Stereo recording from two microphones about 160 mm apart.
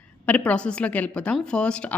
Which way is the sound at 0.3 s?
10° left (ahead or behind).